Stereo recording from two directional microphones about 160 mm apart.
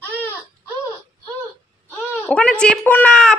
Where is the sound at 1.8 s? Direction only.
10° left (ahead or behind).